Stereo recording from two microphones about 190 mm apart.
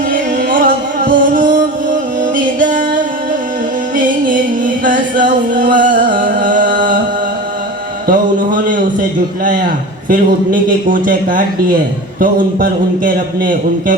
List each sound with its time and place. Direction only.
0.1 s music: 45° right (ahead or behind)
8.0 s a sound: 45° right (ahead or behind)
10.1 s a man's voice: 45° right (ahead or behind)